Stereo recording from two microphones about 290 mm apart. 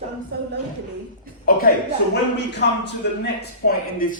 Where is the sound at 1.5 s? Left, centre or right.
Left.